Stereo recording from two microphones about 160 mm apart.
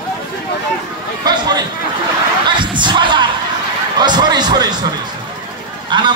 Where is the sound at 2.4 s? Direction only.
30° right (ahead or behind).